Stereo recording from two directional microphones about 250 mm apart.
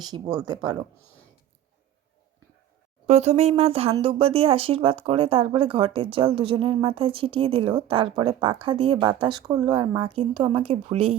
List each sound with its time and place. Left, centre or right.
0.0 s speech: centre
3.1 s speech: right